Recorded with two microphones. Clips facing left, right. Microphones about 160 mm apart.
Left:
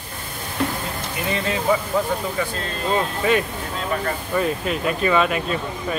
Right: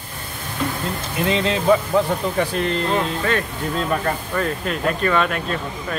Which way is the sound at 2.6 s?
75° right (ahead or behind).